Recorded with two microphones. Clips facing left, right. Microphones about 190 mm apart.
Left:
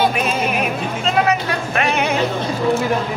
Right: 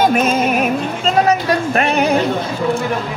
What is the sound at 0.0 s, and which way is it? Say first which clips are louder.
Music: right 4 dB; 45° right (ahead or behind).